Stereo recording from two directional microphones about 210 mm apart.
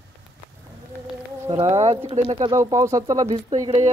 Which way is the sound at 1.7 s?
30° right (ahead or behind).